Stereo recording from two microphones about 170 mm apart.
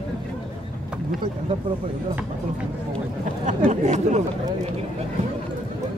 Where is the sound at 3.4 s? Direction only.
45° right (ahead or behind).